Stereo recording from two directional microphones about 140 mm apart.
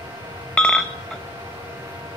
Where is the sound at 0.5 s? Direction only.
5° left (ahead or behind).